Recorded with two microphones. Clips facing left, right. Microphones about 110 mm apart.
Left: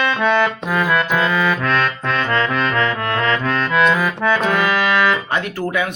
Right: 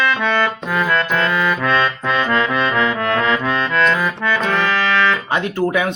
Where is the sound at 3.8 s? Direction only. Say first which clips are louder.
Left 1 dB; 10° left (ahead or behind).